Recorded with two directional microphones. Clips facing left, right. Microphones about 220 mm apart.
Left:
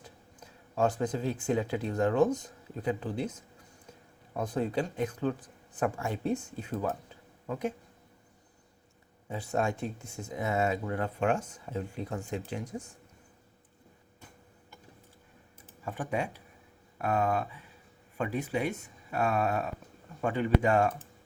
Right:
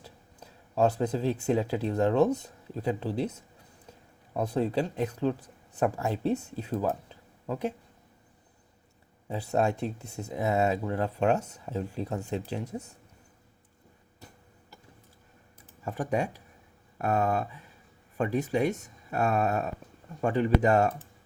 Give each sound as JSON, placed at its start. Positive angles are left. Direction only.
{"t": 0.0, "sound": "speech", "side_deg": -35}
{"t": 4.4, "sound": "speech", "side_deg": -35}
{"t": 9.3, "sound": "speech", "side_deg": -35}
{"t": 15.8, "sound": "speech", "side_deg": -40}